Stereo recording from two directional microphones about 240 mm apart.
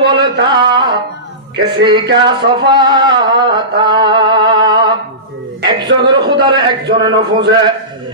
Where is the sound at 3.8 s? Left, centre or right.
Centre.